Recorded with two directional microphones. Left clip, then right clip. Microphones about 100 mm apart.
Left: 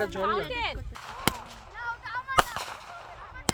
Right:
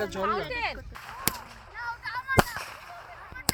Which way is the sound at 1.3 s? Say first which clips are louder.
Even; 45° right (ahead or behind).